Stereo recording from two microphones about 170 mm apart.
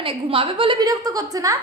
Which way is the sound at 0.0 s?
30° right (ahead or behind).